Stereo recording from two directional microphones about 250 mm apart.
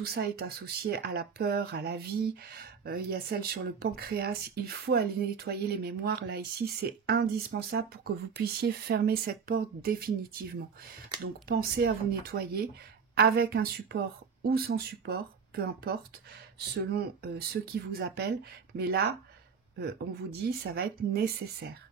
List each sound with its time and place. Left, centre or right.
0.0 s speech: right